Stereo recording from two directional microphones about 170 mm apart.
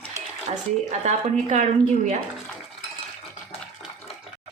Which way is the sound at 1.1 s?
40° right (ahead or behind).